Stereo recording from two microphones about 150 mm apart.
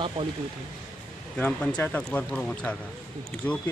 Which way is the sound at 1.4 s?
10° left (ahead or behind).